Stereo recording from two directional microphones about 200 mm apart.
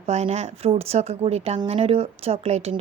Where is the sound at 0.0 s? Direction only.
35° right (ahead or behind).